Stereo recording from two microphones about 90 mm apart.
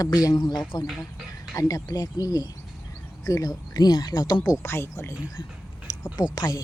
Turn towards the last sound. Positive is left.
turn(degrees=50)  # may be behind; listen again after turning